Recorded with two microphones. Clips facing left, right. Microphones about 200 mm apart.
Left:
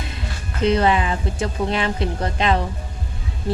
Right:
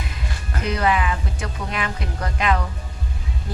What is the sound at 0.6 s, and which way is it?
Speech, 30° left (ahead or behind).